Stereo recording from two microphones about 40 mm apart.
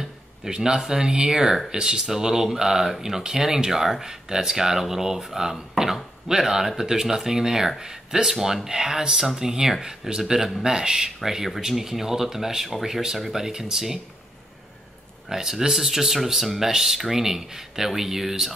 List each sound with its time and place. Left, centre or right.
0.5 s speech: centre
15.2 s speech: centre